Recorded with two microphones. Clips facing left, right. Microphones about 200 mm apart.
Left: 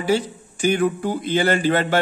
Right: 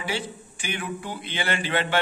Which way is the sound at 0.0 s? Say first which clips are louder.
Left 10 dB; 40° left (ahead or behind).